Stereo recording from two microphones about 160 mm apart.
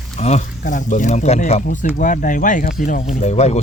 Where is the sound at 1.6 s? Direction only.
55° left (ahead or behind).